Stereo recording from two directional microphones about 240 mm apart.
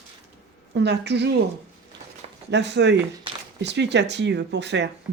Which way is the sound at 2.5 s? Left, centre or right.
Right.